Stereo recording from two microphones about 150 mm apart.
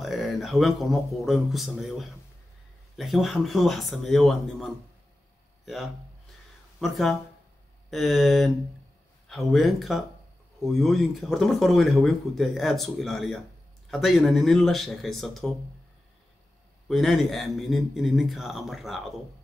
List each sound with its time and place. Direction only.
0.0 s speech: centre (ahead or behind)
6.8 s speech: centre (ahead or behind)
16.8 s speech: centre (ahead or behind)